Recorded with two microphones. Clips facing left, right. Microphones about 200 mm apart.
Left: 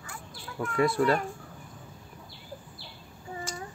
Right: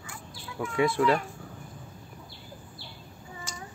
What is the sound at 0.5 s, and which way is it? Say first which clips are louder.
Speech: even; 5° right (ahead or behind).